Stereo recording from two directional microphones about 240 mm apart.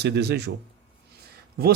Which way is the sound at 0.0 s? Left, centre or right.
Right.